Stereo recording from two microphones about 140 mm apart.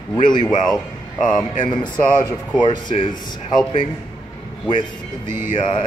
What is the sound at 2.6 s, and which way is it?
Speech, 35° left (ahead or behind).